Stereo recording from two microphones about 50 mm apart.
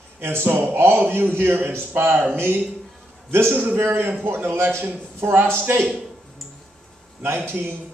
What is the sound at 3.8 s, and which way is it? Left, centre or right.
A man's voice, right.